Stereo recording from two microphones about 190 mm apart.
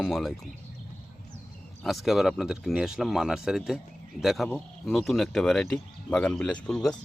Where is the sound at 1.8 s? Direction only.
Centre (ahead or behind).